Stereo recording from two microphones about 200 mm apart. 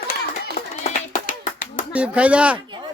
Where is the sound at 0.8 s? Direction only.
40° left (ahead or behind).